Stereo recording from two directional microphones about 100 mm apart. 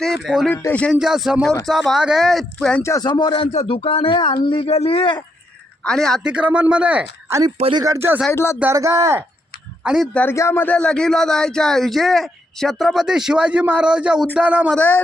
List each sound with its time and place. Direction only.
0.0 s speech: 5° right (ahead or behind)
0.5 s a man's voice: 20° left (ahead or behind)
0.9 s speech: 5° right (ahead or behind)
2.8 s speech: 30° left (ahead or behind)
3.1 s a man's voice: 50° left (ahead or behind)
5.8 s speech: 5° left (ahead or behind)
6.2 s speech: 10° right (ahead or behind)
7.9 s speech: 25° right (ahead or behind)
8.3 s a man's voice: 25° left (ahead or behind)
8.7 s speech: 35° right (ahead or behind)
9.8 s speech: 5° right (ahead or behind)
10.3 s speech: 25° left (ahead or behind); by 14.7 s 15° right (ahead or behind)
14.8 s a man's voice: 20° left (ahead or behind)